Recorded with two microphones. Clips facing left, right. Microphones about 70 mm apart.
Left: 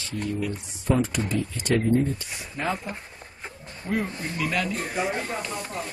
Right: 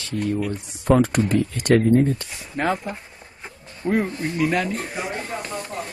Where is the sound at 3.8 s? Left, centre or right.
Right.